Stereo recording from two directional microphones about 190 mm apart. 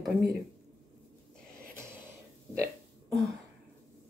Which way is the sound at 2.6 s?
Centre (ahead or behind).